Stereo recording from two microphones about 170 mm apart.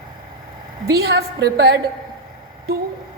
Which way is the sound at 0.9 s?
70° right (ahead or behind).